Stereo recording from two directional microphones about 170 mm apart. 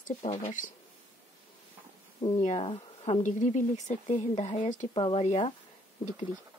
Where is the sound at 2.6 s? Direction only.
35° left (ahead or behind).